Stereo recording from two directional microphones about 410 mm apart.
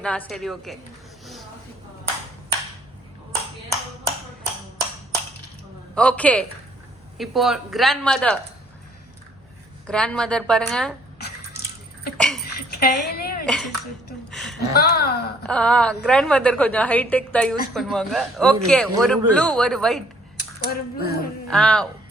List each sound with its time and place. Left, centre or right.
0.0 s a man's voice: centre
5.9 s a man's voice: centre
9.8 s a man's voice: centre
12.1 s a sound: centre
12.5 s a sound: left
13.4 s speech: centre
14.3 s a sound: centre
14.7 s speech: left
15.4 s a man's voice: centre
20.3 s speech: left
21.4 s a man's voice: centre